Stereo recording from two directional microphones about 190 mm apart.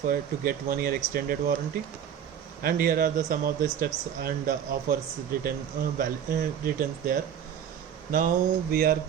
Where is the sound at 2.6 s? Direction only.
50° right (ahead or behind).